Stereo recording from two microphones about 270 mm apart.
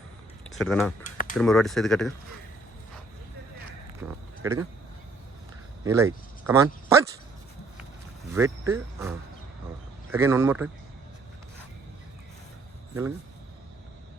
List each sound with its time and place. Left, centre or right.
0.5 s speech: centre
1.0 s a sound: left
1.4 s speech: centre
4.0 s a sound: centre
4.4 s speech: centre
5.8 s speech: centre
8.3 s speech: centre